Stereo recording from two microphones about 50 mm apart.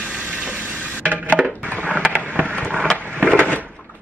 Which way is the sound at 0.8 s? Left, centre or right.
Right.